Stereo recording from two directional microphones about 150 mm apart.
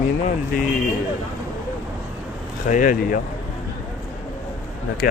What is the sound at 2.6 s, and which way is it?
Speech, 60° left (ahead or behind).